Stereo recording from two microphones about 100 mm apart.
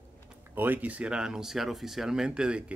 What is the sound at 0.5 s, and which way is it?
Speech, 20° right (ahead or behind).